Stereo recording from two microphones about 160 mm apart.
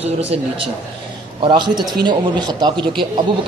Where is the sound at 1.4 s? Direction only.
30° right (ahead or behind).